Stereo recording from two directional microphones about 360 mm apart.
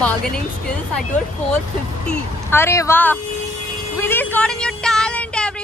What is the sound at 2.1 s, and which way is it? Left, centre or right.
Speech, centre.